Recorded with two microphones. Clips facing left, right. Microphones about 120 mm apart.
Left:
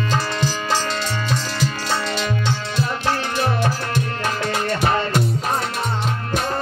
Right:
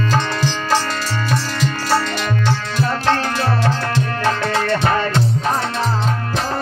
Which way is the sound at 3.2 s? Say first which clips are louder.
Right 2 dB; 20° left (ahead or behind).